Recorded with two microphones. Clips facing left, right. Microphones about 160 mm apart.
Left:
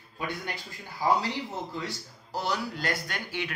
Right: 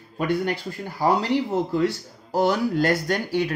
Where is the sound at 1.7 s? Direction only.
60° right (ahead or behind); by 3.5 s 40° right (ahead or behind).